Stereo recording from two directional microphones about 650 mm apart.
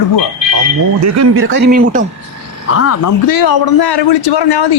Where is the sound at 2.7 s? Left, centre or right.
Left.